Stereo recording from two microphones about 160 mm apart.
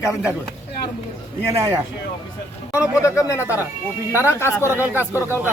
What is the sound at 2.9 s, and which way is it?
Speech, 20° left (ahead or behind).